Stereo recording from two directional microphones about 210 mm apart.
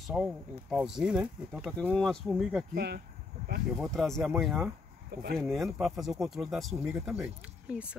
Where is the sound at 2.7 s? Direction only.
50° right (ahead or behind).